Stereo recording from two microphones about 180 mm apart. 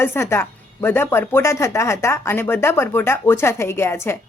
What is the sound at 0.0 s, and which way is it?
A woman's voice, 15° left (ahead or behind).